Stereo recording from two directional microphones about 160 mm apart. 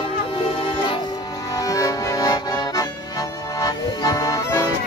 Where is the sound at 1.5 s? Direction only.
20° left (ahead or behind).